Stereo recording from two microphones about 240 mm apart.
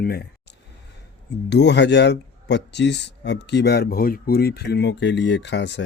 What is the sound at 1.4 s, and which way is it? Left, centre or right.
Speech, left.